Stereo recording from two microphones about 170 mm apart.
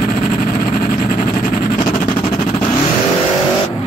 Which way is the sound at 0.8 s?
50° left (ahead or behind).